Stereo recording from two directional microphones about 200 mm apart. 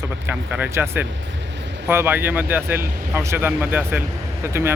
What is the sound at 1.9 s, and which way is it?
Speech, 10° right (ahead or behind).